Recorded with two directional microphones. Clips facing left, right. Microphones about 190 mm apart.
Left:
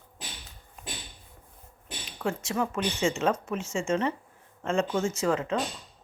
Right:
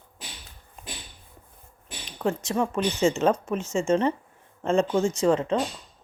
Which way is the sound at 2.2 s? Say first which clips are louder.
Right 4 dB; 35° right (ahead or behind).